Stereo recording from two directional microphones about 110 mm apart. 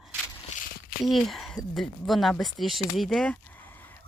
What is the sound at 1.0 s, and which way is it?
Speech, centre (ahead or behind).